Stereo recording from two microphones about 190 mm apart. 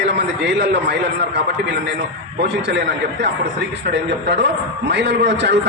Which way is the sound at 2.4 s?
60° right (ahead or behind).